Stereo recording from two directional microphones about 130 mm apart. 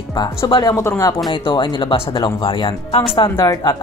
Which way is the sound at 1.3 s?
35° left (ahead or behind).